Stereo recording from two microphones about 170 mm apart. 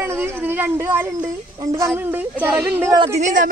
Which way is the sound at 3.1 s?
50° right (ahead or behind).